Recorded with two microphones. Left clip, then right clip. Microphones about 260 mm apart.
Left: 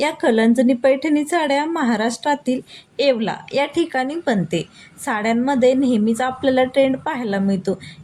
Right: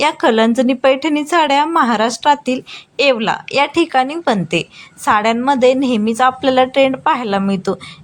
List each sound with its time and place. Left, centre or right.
0.0 s a woman's voice: centre